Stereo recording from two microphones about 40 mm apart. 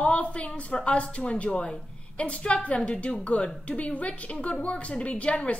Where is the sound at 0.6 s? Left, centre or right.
Left.